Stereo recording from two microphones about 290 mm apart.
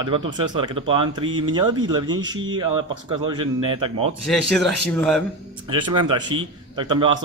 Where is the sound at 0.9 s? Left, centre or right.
Centre.